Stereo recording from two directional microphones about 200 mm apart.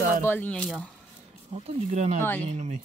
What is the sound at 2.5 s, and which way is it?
Speech, 35° right (ahead or behind).